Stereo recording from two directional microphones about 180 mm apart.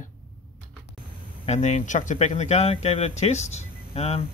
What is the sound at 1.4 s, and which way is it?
Speech, 40° left (ahead or behind).